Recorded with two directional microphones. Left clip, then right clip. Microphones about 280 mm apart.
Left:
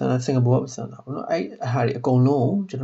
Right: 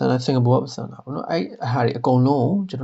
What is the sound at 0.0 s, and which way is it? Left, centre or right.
Speech, right.